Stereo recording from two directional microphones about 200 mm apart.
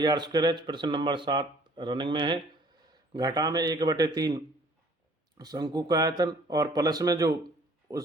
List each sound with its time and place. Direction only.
0.0 s speech: 20° right (ahead or behind)